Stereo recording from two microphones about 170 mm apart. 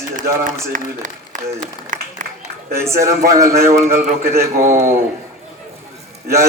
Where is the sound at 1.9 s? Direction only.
50° right (ahead or behind).